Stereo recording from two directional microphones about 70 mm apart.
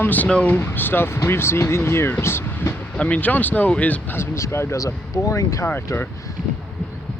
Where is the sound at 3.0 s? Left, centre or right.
Centre.